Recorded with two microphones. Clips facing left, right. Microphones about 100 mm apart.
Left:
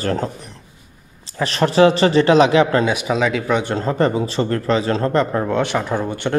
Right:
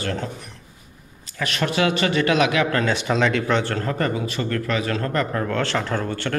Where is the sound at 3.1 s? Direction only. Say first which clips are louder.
Left 2 dB; 5° left (ahead or behind).